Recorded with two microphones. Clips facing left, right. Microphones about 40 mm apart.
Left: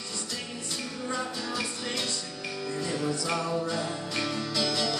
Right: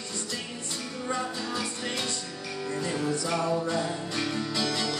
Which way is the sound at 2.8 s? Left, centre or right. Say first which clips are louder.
Right 1 dB; centre.